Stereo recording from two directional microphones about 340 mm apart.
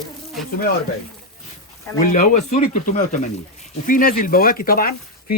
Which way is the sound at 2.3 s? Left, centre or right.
Left.